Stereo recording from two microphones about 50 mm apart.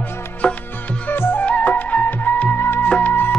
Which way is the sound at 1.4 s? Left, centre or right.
Left.